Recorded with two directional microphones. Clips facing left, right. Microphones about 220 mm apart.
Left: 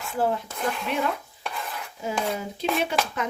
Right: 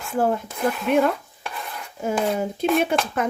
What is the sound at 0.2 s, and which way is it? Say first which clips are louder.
Speech: right 4 dB; 50° right (ahead or behind).